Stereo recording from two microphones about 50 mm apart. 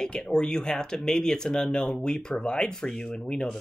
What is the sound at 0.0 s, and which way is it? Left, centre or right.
Speech, centre.